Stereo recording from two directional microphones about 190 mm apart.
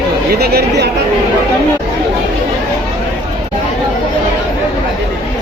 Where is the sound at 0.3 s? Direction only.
55° right (ahead or behind).